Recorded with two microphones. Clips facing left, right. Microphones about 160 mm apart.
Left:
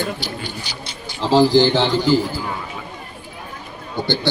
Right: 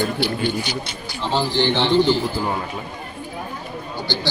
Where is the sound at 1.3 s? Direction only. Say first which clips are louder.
Left 8 dB; 90° left.